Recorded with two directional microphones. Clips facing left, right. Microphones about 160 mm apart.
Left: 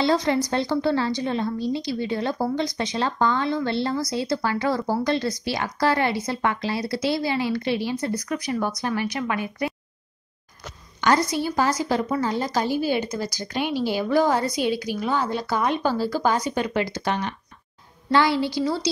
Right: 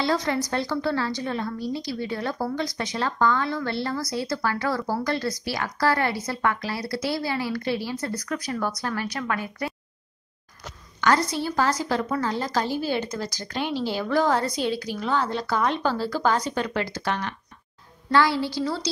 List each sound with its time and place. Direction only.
0.0 s a woman's voice: 25° left (ahead or behind)
11.0 s speech: 15° left (ahead or behind)